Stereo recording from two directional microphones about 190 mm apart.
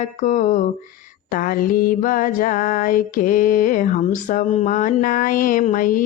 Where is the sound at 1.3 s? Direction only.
45° left (ahead or behind).